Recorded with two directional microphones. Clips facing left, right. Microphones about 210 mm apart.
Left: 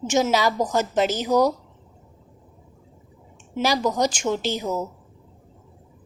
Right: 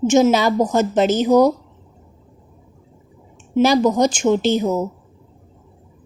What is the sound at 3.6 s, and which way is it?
A woman's voice, 25° right (ahead or behind).